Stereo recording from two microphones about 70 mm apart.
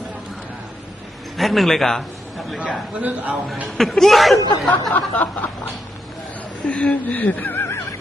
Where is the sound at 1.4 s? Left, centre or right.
Centre.